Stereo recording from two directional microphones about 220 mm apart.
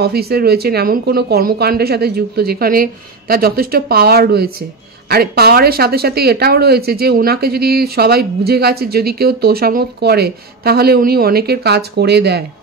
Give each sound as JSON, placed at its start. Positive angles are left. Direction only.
{"t": 0.0, "sound": "speech", "side_deg": -45}